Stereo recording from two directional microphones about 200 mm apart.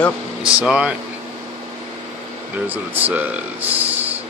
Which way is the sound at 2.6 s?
10° right (ahead or behind).